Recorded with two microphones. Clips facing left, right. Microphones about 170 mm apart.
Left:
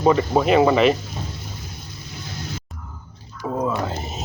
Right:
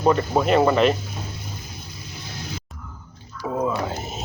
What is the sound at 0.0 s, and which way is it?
Speech, centre (ahead or behind).